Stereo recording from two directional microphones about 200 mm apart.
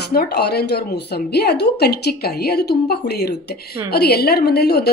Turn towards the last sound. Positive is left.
turn(degrees=55)  # may be behind; listen again after turning